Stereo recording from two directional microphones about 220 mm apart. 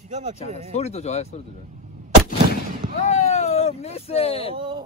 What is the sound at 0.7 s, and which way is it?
Speech, 30° left (ahead or behind).